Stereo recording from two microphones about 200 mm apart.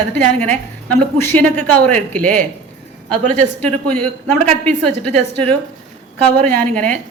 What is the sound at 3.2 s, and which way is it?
Speech, 35° right (ahead or behind).